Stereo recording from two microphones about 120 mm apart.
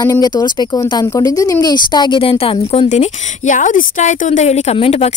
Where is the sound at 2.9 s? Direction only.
85° left; by 5.1 s 60° left (ahead or behind).